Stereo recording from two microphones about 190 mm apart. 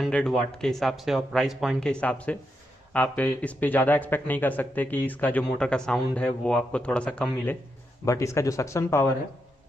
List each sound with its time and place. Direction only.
0.0 s speech: centre (ahead or behind)